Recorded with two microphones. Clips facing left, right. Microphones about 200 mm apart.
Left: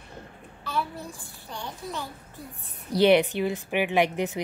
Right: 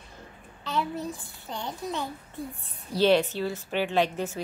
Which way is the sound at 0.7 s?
20° right (ahead or behind).